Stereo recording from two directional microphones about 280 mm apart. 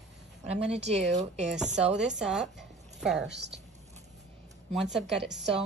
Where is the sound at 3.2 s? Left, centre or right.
Right.